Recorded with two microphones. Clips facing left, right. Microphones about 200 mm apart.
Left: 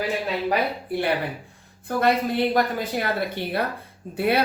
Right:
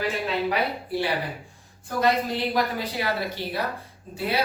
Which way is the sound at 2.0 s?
55° left (ahead or behind).